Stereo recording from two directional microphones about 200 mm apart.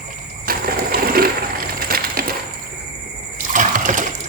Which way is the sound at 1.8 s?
45° right (ahead or behind).